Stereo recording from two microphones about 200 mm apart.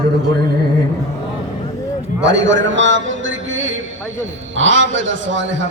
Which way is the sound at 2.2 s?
65° right (ahead or behind).